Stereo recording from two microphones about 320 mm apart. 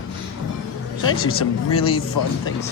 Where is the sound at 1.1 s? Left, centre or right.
Left.